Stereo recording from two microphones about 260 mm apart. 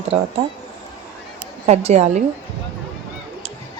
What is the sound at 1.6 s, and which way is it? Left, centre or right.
Speech, right.